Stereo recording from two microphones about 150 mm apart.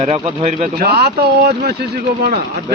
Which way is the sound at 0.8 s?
90° right.